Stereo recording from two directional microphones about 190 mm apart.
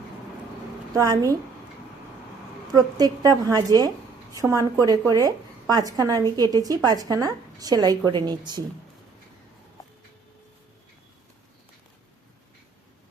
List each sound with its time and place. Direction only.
0.9 s a woman's voice: 15° right (ahead or behind)
2.7 s a woman's voice: 20° right (ahead or behind)